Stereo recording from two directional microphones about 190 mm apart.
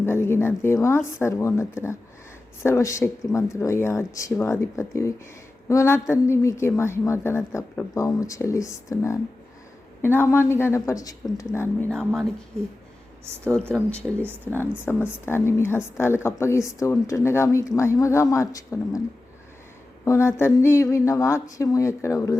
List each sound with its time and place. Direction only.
0.0 s a woman's voice: 15° left (ahead or behind)
13.2 s speech: 15° right (ahead or behind)
13.5 s a woman's voice: 5° left (ahead or behind)
20.1 s a woman's voice: 15° left (ahead or behind)